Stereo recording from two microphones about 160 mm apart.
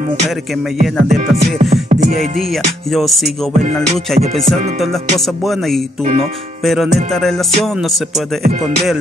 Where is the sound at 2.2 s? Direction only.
Centre (ahead or behind).